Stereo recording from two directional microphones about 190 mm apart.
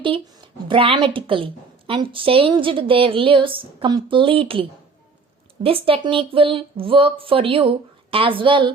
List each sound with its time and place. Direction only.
0.0 s speech: 25° right (ahead or behind)
5.6 s speech: 30° right (ahead or behind)